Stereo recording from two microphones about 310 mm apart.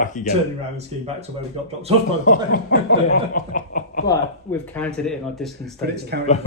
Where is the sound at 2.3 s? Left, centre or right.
Left.